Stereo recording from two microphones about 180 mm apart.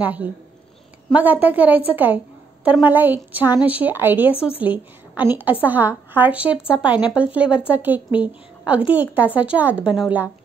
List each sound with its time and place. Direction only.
0.0 s a woman's voice: 10° right (ahead or behind)
4.3 s speech: 30° left (ahead or behind)
4.6 s a woman's voice: 10° right (ahead or behind)